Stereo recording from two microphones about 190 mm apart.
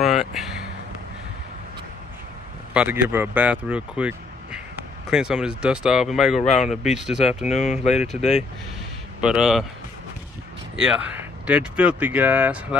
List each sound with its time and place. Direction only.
0.0 s a sound: centre (ahead or behind)
2.7 s speech: 5° right (ahead or behind)
7.6 s speech: 40° left (ahead or behind)
7.9 s speech: centre (ahead or behind)
8.2 s speech: 35° left (ahead or behind)
9.2 s speech: 5° right (ahead or behind)
10.8 s speech: 5° right (ahead or behind)